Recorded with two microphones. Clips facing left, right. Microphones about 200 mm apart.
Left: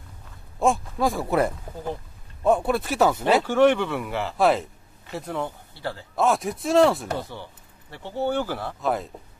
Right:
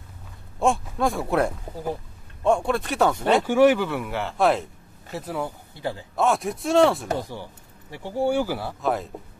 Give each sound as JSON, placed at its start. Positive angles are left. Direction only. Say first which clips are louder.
{"t": 0.6, "sound": "speech", "louder": "even", "side_deg": 0}
{"t": 3.4, "sound": "speech", "louder": "right 3 dB", "side_deg": -5}
{"t": 5.8, "sound": "speech", "louder": "right 2 dB", "side_deg": -15}
{"t": 6.1, "sound": "speech", "louder": "even", "side_deg": 0}
{"t": 7.1, "sound": "speech", "louder": "right 2 dB", "side_deg": -15}